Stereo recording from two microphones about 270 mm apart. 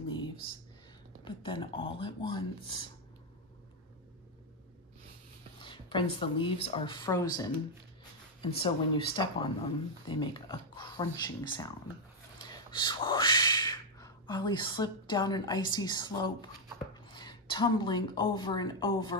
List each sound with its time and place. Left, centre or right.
1.2 s speech: centre
5.6 s a woman's voice: centre